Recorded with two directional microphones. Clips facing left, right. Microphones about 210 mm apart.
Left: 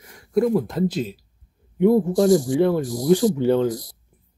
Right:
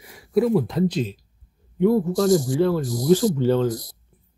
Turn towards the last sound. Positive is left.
turn(degrees=15)  # may be behind; listen again after turning